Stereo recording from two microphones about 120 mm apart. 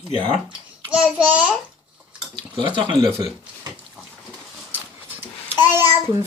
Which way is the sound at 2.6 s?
40° right (ahead or behind).